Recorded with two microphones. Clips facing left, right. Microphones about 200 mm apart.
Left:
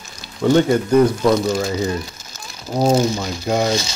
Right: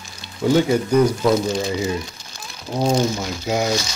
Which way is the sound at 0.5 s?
5° right (ahead or behind).